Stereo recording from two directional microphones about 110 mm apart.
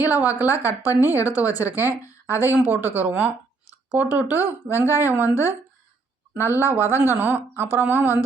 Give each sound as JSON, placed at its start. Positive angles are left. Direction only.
{"t": 0.0, "sound": "speech", "side_deg": -15}
{"t": 2.2, "sound": "speech", "side_deg": 25}
{"t": 2.7, "sound": "speech", "side_deg": -20}
{"t": 6.3, "sound": "speech", "side_deg": -20}